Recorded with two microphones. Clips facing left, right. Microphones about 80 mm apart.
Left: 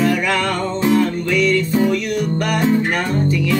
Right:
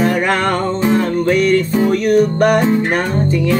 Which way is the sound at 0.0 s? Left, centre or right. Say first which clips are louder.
Right 3 dB; right.